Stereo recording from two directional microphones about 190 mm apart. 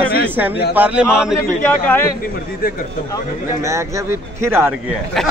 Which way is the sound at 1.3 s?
10° left (ahead or behind).